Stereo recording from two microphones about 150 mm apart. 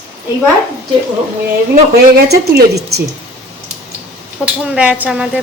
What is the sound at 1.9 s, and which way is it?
A woman's voice, 90° right.